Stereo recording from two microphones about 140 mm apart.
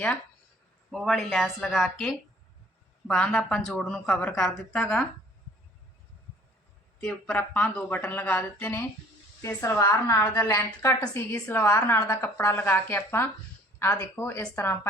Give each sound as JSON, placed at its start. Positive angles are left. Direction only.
{"t": 0.9, "sound": "a woman's voice", "side_deg": 0}
{"t": 7.0, "sound": "a woman's voice", "side_deg": 10}